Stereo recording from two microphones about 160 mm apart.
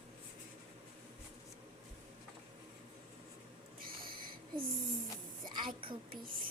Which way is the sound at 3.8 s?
65° right (ahead or behind).